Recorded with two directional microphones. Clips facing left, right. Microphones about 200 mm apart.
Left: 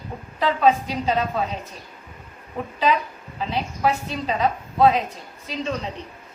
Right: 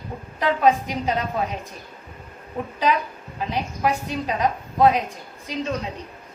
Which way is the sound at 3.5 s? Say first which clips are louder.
Left 1 dB; 15° right (ahead or behind).